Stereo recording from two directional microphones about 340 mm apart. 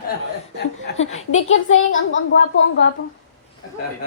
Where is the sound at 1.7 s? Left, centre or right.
Left.